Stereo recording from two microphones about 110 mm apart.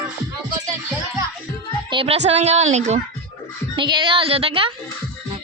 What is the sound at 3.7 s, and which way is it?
A woman's voice, 45° right (ahead or behind).